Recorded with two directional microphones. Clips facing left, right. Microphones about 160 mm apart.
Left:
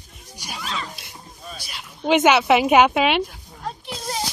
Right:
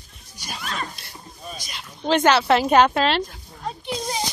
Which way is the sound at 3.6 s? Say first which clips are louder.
Right 3 dB; centre (ahead or behind).